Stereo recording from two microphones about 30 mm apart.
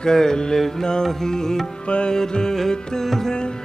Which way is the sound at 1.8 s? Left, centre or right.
Left.